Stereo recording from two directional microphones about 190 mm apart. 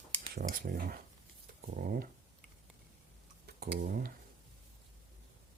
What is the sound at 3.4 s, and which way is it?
Speech, 50° right (ahead or behind).